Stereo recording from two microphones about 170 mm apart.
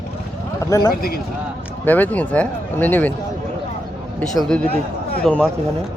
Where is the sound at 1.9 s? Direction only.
10° left (ahead or behind).